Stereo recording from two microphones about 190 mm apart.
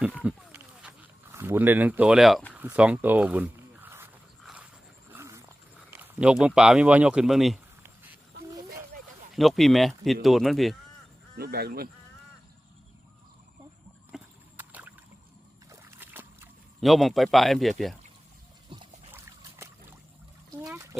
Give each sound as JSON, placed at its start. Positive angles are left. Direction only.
{"t": 0.2, "sound": "a sound", "side_deg": -5}
{"t": 4.4, "sound": "dog", "side_deg": -5}
{"t": 5.1, "sound": "wild animals", "side_deg": -15}
{"t": 5.9, "sound": "speech", "side_deg": -10}
{"t": 9.3, "sound": "speech", "side_deg": 0}
{"t": 11.3, "sound": "speech", "side_deg": -55}
{"t": 14.1, "sound": "a sound", "side_deg": -10}
{"t": 16.8, "sound": "speech", "side_deg": 0}
{"t": 18.7, "sound": "boat", "side_deg": -25}
{"t": 19.1, "sound": "trickle", "side_deg": -15}